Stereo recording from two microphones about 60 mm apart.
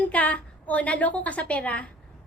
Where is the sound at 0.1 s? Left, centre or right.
Left.